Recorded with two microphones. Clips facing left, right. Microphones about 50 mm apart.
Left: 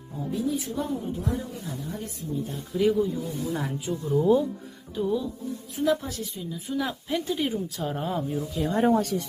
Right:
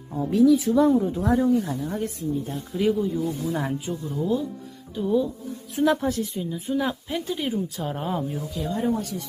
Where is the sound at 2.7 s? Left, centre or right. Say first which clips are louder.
Even; centre.